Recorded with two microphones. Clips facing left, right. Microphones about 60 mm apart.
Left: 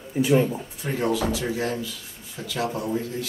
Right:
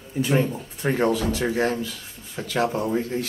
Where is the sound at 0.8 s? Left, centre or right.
Right.